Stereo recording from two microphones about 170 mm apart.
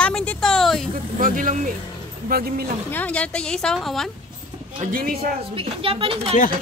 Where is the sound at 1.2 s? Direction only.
50° right (ahead or behind).